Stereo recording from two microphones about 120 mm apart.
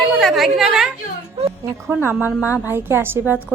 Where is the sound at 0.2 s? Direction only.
Centre (ahead or behind).